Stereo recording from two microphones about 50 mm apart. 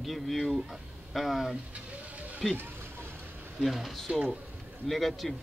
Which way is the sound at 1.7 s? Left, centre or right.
Right.